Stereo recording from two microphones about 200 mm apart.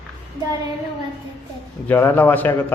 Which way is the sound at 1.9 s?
10° left (ahead or behind).